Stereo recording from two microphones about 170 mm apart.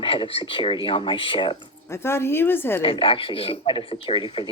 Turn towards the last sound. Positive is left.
turn(degrees=30)  # may be behind; listen again after turning